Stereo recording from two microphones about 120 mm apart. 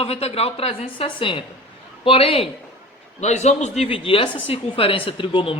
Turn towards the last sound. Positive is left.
turn(degrees=45)  # may be behind; listen again after turning